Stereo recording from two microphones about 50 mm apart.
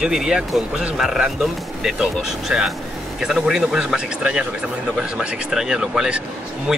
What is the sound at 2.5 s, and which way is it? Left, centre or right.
Speech, centre.